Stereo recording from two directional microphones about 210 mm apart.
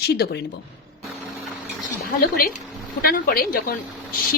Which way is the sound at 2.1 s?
45° left (ahead or behind).